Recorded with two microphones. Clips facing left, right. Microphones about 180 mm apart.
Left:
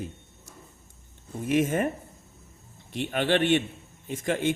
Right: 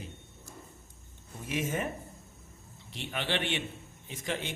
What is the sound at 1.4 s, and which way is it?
Speech, 55° left (ahead or behind).